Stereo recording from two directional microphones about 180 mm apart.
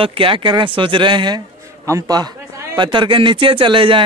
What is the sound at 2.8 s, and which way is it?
Speech, 25° right (ahead or behind).